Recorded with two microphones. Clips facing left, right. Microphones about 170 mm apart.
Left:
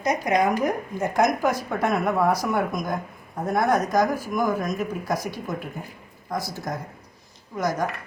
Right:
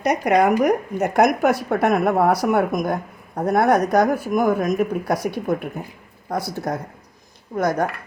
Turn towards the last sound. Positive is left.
turn(degrees=-60)  # may be behind; listen again after turning